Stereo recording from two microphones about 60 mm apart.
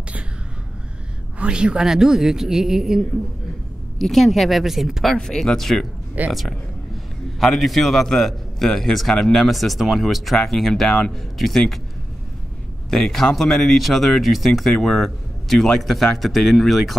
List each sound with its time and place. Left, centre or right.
1.4 s a woman's voice: centre
5.1 s speech: centre
6.2 s speech: right
7.3 s a man's voice: centre
12.9 s speech: centre